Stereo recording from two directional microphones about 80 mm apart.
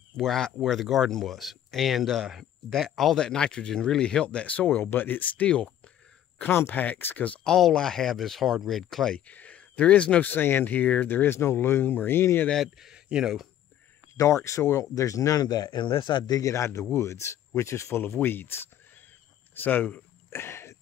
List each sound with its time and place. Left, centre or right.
0.2 s speech: centre; by 7.3 s left
7.4 s speech: centre
9.1 s speech: centre
10.3 s speech: left
12.7 s a man's voice: centre
14.1 s speech: left
16.3 s a man's voice: left
19.5 s a sound: left